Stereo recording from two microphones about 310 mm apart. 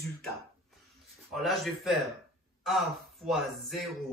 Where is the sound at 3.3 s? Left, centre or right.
Centre.